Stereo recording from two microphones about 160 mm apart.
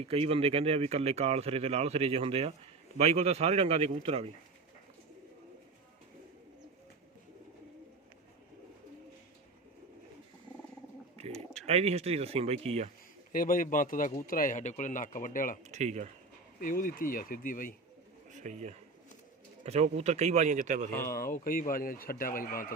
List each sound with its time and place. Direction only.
0.0 s speech: 35° right (ahead or behind)
11.2 s speech: 40° right (ahead or behind)
13.3 s speech: 60° left (ahead or behind)
15.7 s a man's voice: 45° right (ahead or behind)
16.6 s speech: 60° left (ahead or behind)
18.3 s a man's voice: 50° right (ahead or behind)
21.1 s speech: 60° left (ahead or behind)